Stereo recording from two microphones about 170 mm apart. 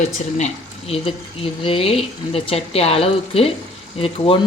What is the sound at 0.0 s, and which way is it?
Speech, 40° left (ahead or behind).